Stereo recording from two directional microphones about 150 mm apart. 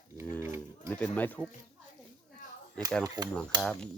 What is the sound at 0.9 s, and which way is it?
Speech, 10° left (ahead or behind).